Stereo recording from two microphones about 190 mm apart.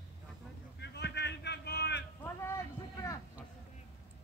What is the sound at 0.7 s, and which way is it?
Vehicle, 60° left (ahead or behind).